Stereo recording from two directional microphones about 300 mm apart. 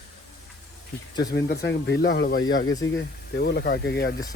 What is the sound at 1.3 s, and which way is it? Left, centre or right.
Speech, left.